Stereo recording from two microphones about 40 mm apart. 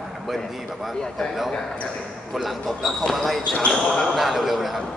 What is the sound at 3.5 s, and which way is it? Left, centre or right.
Speech, centre.